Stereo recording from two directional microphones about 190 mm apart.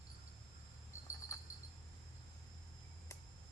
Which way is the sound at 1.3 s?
15° left (ahead or behind).